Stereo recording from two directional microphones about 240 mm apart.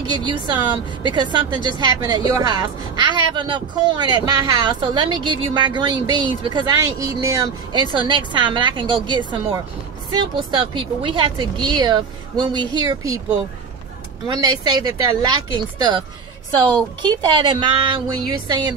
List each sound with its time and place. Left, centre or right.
0.1 s a woman's voice: centre
14.2 s speech: centre
17.0 s a woman's voice: centre